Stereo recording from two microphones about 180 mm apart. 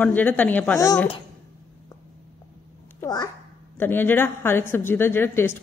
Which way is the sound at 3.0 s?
20° left (ahead or behind).